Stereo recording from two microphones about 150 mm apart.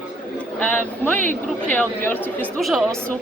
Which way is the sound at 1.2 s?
60° right (ahead or behind).